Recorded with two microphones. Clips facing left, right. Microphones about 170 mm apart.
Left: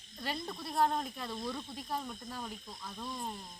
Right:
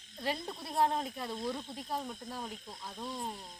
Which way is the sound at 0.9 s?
5° right (ahead or behind).